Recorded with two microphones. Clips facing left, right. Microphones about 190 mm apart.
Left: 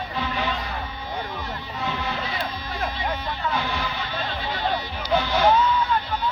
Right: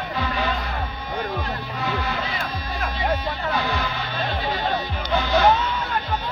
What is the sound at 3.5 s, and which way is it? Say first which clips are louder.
Music: right 3 dB; 15° right (ahead or behind).